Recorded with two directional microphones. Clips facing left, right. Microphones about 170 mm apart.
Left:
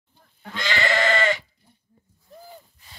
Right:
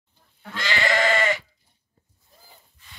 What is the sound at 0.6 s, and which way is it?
Goat, 10° right (ahead or behind).